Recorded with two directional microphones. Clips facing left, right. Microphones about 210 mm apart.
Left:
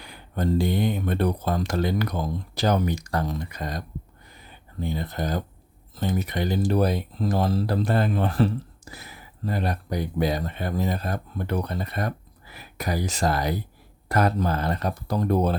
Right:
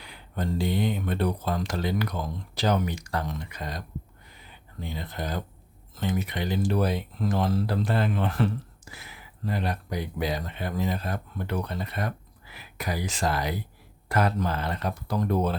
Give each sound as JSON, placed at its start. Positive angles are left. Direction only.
{"t": 0.0, "sound": "speech", "side_deg": 45}
{"t": 4.8, "sound": "speech", "side_deg": 45}